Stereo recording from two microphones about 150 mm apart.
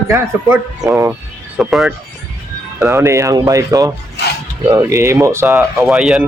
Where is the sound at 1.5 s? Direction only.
Centre (ahead or behind).